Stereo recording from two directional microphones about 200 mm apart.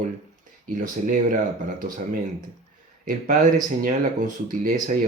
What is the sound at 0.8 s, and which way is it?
Speech, 40° right (ahead or behind).